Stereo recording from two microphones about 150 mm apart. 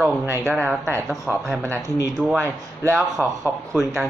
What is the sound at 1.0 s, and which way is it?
Speech, centre (ahead or behind).